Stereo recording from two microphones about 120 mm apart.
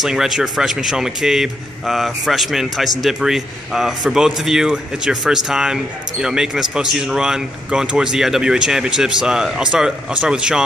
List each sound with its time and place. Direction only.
0.0 s a man's voice: 5° right (ahead or behind)